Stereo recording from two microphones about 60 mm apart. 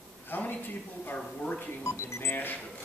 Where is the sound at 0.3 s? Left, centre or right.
Left.